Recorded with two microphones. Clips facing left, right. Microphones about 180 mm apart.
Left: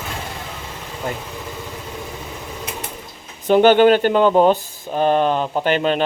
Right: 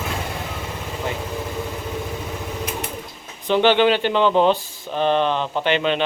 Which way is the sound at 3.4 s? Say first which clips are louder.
Left 5 dB; 45° left (ahead or behind).